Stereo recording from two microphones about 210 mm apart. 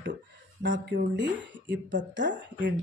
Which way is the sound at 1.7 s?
60° right (ahead or behind).